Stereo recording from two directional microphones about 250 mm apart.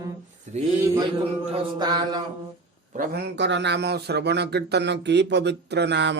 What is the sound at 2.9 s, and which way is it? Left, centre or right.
Speech, right.